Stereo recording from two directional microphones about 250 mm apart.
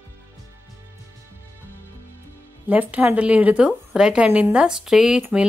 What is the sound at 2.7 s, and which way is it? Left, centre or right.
A woman's voice, centre.